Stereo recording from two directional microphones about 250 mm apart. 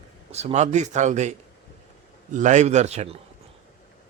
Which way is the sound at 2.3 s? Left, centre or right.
Right.